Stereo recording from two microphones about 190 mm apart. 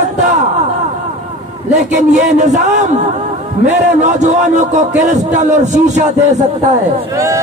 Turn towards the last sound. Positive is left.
turn(degrees=-15)  # may be behind; listen again after turning